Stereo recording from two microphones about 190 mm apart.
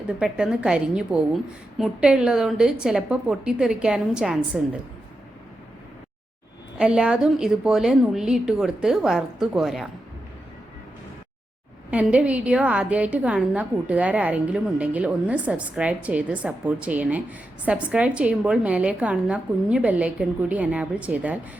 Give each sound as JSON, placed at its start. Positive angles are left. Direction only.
{"t": 0.2, "sound": "a woman's voice", "side_deg": -5}
{"t": 6.7, "sound": "a woman's voice", "side_deg": -5}
{"t": 11.9, "sound": "a woman's voice", "side_deg": -5}